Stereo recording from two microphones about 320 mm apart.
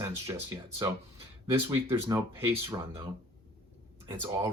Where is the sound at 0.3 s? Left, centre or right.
Centre.